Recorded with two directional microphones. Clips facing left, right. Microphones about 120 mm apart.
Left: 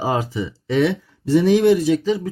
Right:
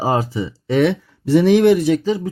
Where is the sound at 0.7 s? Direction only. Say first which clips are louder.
Right 2 dB; 60° right (ahead or behind).